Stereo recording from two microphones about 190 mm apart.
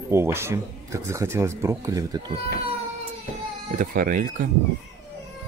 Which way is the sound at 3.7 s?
45° right (ahead or behind).